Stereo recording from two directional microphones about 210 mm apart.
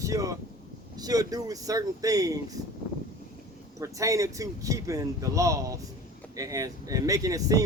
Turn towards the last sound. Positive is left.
turn(degrees=-15)  # may be behind; listen again after turning